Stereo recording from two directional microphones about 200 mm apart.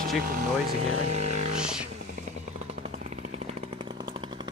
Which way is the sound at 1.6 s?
5° right (ahead or behind).